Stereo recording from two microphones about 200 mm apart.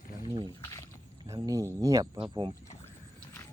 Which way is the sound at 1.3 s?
15° right (ahead or behind).